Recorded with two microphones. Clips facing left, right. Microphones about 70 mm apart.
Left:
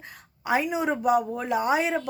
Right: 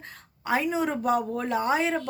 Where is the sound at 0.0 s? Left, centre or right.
Centre.